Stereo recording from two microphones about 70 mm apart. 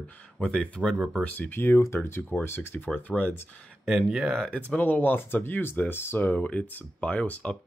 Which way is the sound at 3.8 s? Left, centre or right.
Centre.